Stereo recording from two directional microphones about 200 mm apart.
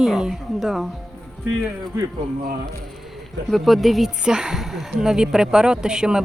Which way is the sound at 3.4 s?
Centre (ahead or behind).